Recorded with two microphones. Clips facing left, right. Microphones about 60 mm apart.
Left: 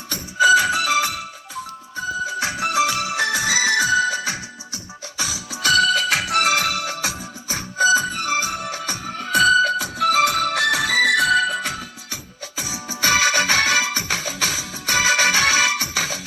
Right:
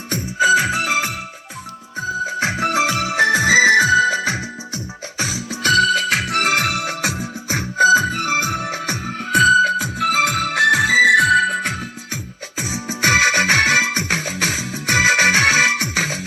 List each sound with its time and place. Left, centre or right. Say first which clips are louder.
0.1 s music: even; right
11.2 s music: right 3 dB; right